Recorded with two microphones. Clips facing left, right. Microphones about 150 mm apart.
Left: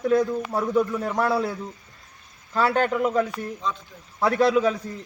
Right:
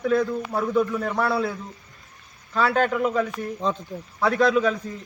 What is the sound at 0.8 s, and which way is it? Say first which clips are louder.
Speech: even; 20° left (ahead or behind).